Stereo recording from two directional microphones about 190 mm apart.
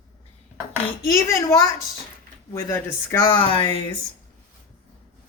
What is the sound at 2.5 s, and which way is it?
Speech, 15° left (ahead or behind).